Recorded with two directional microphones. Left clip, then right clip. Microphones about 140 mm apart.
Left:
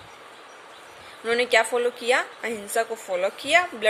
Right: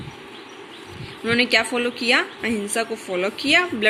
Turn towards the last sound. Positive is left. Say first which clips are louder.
# right 3 dB
turn(degrees=25)  # may be behind; listen again after turning